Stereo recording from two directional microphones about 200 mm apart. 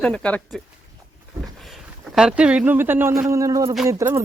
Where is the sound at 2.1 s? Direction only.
5° right (ahead or behind).